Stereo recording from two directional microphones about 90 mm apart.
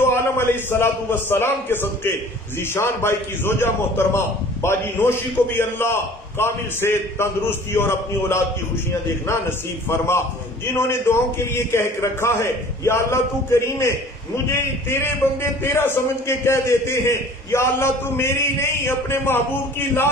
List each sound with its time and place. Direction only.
0.1 s a man's voice: 25° left (ahead or behind)
9.8 s a man's voice: 30° left (ahead or behind)